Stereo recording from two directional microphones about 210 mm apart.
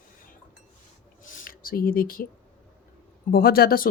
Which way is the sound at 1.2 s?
40° left (ahead or behind).